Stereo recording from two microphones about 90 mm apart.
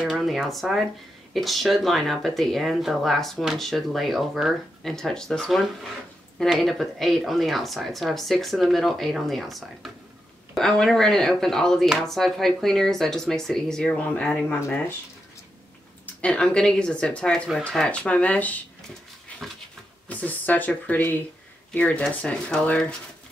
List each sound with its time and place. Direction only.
0.0 s speech: 5° right (ahead or behind); by 14.4 s 10° left (ahead or behind)
14.5 s speech: 25° left (ahead or behind)
16.2 s speech: 10° left (ahead or behind)
20.1 s speech: 20° left (ahead or behind)